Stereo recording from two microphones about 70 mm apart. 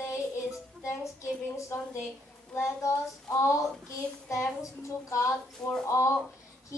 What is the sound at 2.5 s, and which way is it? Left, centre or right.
Speech, left.